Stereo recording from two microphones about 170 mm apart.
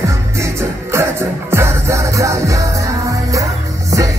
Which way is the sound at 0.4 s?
15° right (ahead or behind).